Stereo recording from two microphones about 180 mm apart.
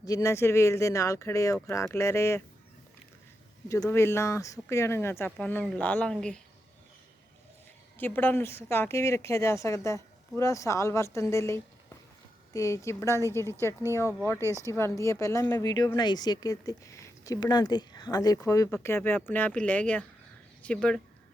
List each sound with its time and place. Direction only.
0.0 s speech: 20° left (ahead or behind)
3.7 s speech: 15° left (ahead or behind)
7.9 s speech: 10° left (ahead or behind)
14.5 s speech: 15° left (ahead or behind)